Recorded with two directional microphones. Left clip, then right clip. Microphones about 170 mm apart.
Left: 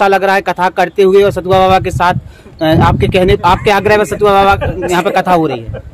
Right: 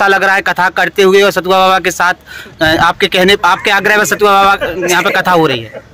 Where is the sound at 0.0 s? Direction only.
5° right (ahead or behind).